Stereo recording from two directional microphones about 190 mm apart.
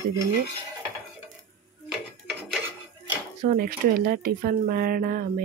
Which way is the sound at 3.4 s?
45° right (ahead or behind).